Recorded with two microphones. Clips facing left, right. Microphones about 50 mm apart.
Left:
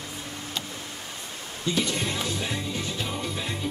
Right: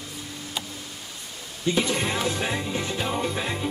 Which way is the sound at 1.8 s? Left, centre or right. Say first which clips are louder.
Right 3 dB; right.